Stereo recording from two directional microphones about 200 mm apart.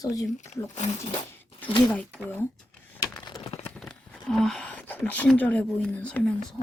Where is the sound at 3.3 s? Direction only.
20° left (ahead or behind).